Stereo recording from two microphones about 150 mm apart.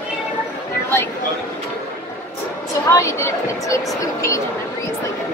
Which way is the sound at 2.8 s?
20° left (ahead or behind).